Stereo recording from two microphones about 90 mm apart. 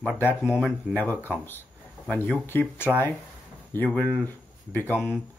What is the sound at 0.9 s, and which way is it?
Speech, 20° left (ahead or behind).